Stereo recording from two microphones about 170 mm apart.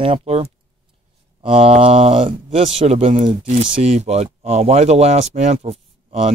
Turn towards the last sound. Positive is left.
turn(degrees=-35)  # may be behind; listen again after turning